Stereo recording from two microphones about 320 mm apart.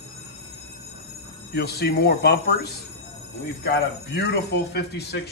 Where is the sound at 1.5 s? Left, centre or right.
Left.